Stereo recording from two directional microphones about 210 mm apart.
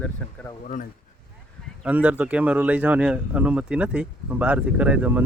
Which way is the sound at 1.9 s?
5° right (ahead or behind).